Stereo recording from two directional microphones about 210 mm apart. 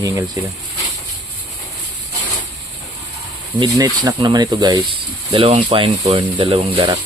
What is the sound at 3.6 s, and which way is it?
Speech, 15° right (ahead or behind).